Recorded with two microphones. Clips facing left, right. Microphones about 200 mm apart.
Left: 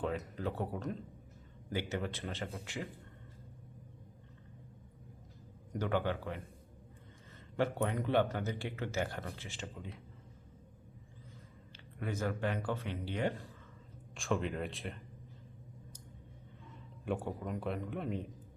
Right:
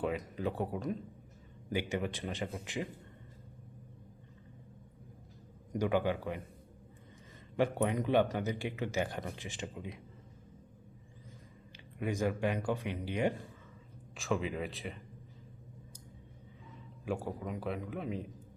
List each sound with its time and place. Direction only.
0.0 s speech: 15° right (ahead or behind)
5.7 s speech: 15° right (ahead or behind)
7.5 s speech: 15° right (ahead or behind)
11.9 s speech: 15° right (ahead or behind)
14.2 s a man's voice: centre (ahead or behind)
17.1 s a man's voice: centre (ahead or behind)